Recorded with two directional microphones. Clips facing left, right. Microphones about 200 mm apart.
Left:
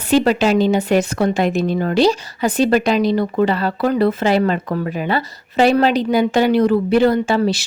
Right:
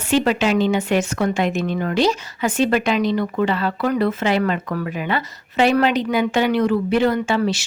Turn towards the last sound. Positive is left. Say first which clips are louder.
# left 3 dB
turn(degrees=35)  # may be behind; listen again after turning